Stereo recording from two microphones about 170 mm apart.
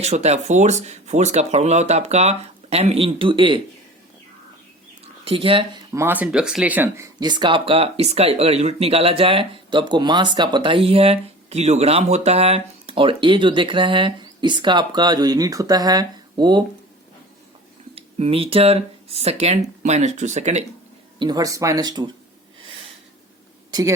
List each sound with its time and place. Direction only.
0.0 s speech: 40° right (ahead or behind)
5.2 s speech: 35° right (ahead or behind)
5.9 s speech: 15° right (ahead or behind)
17.9 s speech: 35° right (ahead or behind)
21.2 s speech: 25° right (ahead or behind)